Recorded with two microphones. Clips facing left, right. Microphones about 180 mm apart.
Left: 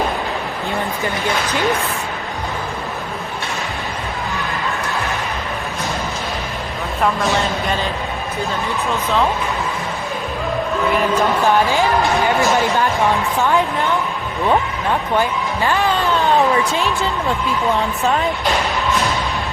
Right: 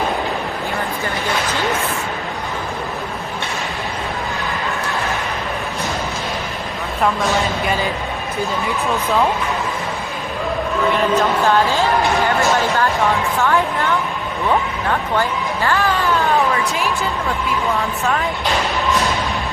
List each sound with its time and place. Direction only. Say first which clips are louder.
7.0 s speech: even; centre (ahead or behind)
11.4 s speech: even; 15° left (ahead or behind)
15.2 s speech: left 1 dB; 15° left (ahead or behind)